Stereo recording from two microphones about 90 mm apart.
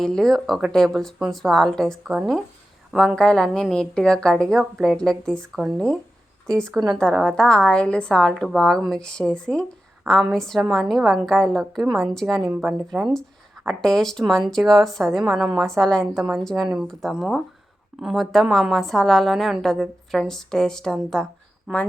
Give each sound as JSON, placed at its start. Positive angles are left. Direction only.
{"t": 0.0, "sound": "a woman's voice", "side_deg": 5}
{"t": 3.2, "sound": "a woman's voice", "side_deg": 5}
{"t": 5.5, "sound": "a woman's voice", "side_deg": -5}
{"t": 6.5, "sound": "a woman's voice", "side_deg": 10}
{"t": 12.4, "sound": "a woman's voice", "side_deg": -20}
{"t": 12.9, "sound": "speech", "side_deg": -5}
{"t": 13.7, "sound": "a woman's voice", "side_deg": 5}
{"t": 15.8, "sound": "a woman's voice", "side_deg": 10}